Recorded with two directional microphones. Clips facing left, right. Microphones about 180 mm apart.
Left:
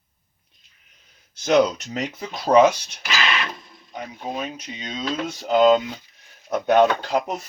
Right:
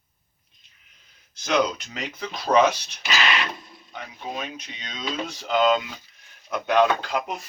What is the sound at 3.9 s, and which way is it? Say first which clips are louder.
Speech: left 4 dB; 35° left (ahead or behind).